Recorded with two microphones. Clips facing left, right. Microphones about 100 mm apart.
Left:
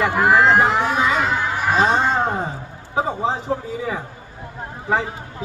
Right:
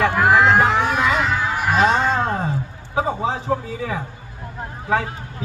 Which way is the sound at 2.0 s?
15° left (ahead or behind).